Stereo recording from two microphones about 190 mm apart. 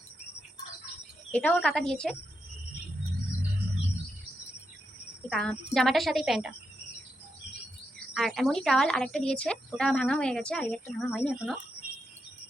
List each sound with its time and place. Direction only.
1.3 s a woman's voice: 5° left (ahead or behind)
5.3 s a woman's voice: 5° left (ahead or behind)
8.1 s a woman's voice: centre (ahead or behind)